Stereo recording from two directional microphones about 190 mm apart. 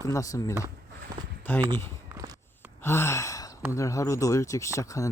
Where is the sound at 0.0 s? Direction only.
15° left (ahead or behind).